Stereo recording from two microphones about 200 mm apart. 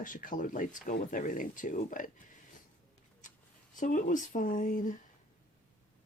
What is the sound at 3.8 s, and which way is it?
Speech, 40° left (ahead or behind).